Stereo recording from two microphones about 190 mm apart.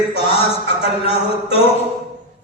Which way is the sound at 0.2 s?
30° left (ahead or behind).